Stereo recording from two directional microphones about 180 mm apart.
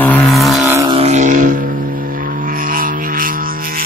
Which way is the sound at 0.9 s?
35° right (ahead or behind).